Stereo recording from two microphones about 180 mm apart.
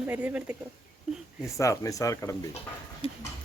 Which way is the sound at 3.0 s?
30° left (ahead or behind).